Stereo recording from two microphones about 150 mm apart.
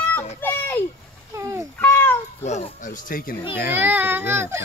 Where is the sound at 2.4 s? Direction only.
45° left (ahead or behind); by 3.3 s 65° left (ahead or behind).